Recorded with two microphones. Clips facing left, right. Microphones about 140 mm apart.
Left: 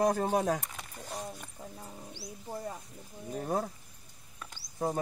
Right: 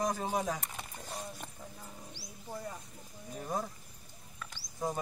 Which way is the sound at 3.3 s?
60° left (ahead or behind).